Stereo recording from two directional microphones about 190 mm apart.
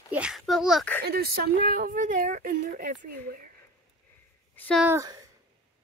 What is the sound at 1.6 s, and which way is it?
A woman's voice, 45° right (ahead or behind).